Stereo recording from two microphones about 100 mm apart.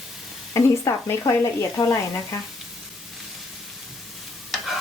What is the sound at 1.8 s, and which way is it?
Speech, 40° left (ahead or behind).